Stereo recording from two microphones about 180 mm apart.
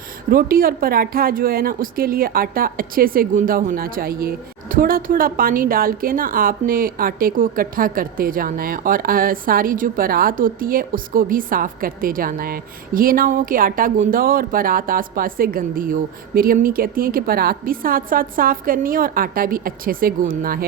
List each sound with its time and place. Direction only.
0.3 s a woman's voice: 55° right (ahead or behind)